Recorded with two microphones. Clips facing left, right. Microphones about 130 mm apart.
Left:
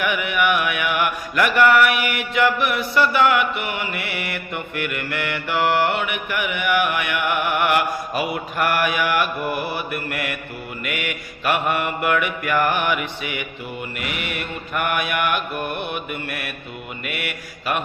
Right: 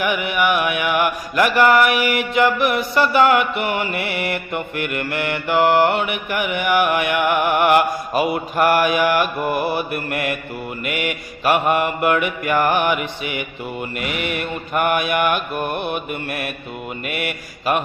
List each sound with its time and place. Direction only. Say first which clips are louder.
0.0 s mantra: right 2 dB; 30° right (ahead or behind)